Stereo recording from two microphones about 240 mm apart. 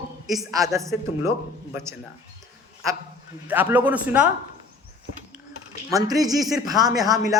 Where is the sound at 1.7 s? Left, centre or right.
Centre.